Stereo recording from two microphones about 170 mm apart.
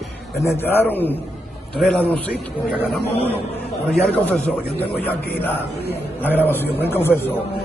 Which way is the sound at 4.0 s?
10° left (ahead or behind).